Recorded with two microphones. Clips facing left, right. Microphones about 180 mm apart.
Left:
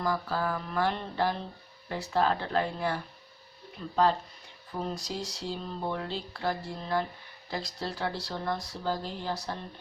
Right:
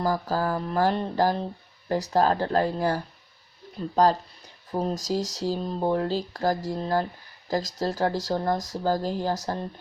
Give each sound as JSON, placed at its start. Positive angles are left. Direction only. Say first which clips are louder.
{"t": 0.0, "sound": "speech", "louder": "right 5 dB", "side_deg": -40}